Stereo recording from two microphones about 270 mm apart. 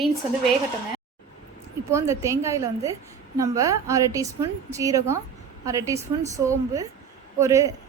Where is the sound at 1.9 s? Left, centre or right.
Centre.